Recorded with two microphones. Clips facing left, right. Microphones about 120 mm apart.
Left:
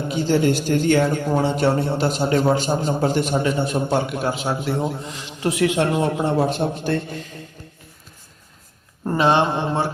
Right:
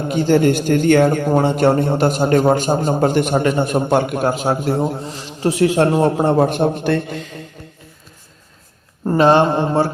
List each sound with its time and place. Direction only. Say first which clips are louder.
0.1 s a man's voice: right 5 dB; 55° right (ahead or behind); by 7.2 s 70° right (ahead or behind)
9.1 s a man's voice: right 5 dB; 45° right (ahead or behind)